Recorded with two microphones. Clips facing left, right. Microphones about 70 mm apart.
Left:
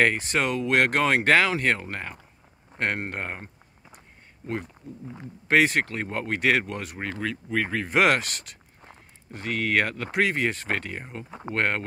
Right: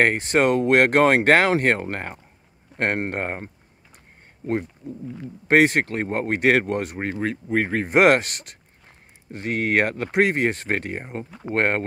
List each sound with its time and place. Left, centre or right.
0.0 s speech: right
5.5 s speech: right
7.9 s speech: right
11.2 s speech: left
11.5 s speech: right